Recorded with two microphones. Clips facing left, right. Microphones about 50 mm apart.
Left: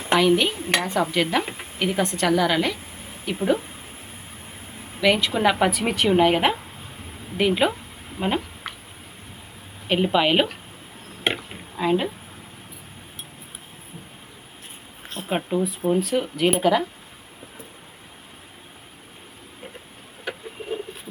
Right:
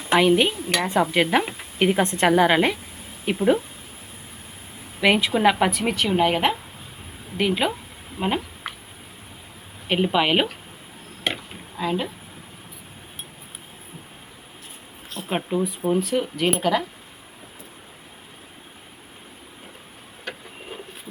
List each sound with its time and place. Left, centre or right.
0.1 s a woman's voice: right
0.5 s dishes: left
1.1 s a woman's voice: right
4.9 s a woman's voice: centre
9.9 s a woman's voice: centre
11.3 s chop: centre
11.8 s speech: centre
15.3 s a woman's voice: centre
20.3 s bird: centre